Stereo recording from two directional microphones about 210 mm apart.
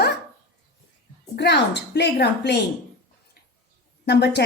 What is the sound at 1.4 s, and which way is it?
A woman's voice, 55° left (ahead or behind).